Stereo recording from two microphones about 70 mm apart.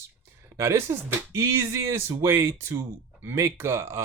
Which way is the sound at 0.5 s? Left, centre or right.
Right.